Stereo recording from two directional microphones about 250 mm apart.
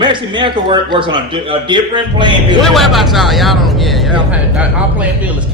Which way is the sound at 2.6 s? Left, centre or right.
Centre.